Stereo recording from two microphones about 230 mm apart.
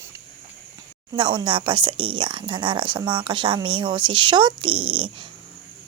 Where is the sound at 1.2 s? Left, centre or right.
Right.